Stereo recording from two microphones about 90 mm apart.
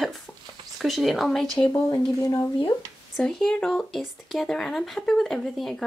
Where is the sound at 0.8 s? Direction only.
Centre (ahead or behind).